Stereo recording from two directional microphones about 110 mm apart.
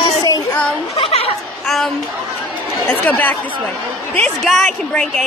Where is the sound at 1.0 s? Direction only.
60° left (ahead or behind).